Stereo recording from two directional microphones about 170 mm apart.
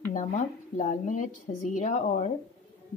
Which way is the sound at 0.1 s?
45° left (ahead or behind).